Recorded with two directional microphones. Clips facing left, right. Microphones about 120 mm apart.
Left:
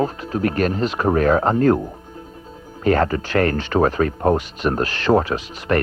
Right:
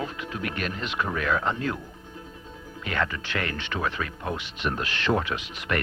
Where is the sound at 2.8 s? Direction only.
40° left (ahead or behind).